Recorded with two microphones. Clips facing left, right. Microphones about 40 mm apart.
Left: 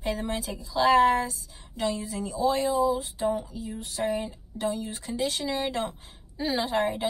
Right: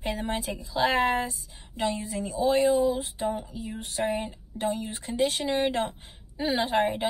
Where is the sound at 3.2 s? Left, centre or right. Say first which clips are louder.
Left 2 dB; right.